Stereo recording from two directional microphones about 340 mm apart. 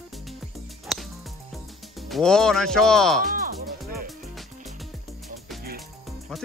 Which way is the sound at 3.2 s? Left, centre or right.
Right.